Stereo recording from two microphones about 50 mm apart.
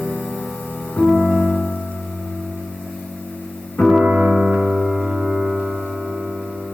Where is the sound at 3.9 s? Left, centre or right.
Centre.